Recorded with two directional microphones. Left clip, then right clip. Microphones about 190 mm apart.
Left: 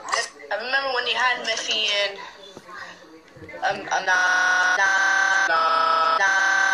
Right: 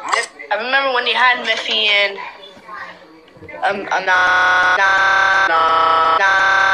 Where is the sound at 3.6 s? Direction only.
35° right (ahead or behind).